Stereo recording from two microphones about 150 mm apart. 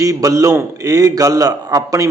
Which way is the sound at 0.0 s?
20° right (ahead or behind).